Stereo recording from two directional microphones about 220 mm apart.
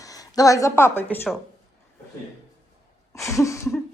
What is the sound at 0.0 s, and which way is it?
Speech, 15° left (ahead or behind).